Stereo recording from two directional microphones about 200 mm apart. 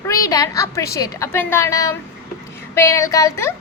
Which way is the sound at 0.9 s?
15° left (ahead or behind).